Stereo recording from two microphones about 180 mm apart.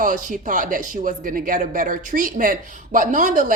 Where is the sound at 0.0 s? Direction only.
45° right (ahead or behind).